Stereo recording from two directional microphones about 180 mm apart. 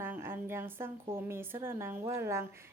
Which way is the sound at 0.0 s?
15° right (ahead or behind).